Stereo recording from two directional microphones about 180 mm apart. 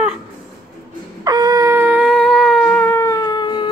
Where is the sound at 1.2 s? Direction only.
20° right (ahead or behind).